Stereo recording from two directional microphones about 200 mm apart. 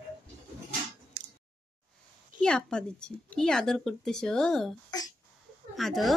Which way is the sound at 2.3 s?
5° left (ahead or behind).